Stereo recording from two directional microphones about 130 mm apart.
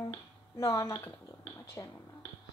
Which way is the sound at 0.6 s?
25° left (ahead or behind).